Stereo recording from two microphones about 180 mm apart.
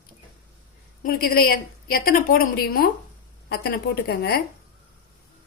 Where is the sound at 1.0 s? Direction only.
55° left (ahead or behind).